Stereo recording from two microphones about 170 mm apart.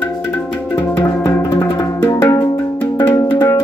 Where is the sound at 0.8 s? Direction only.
20° left (ahead or behind).